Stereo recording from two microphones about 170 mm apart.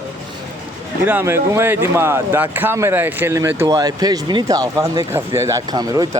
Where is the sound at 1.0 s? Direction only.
10° right (ahead or behind).